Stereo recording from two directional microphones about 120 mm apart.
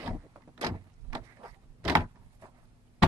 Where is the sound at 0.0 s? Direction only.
25° right (ahead or behind).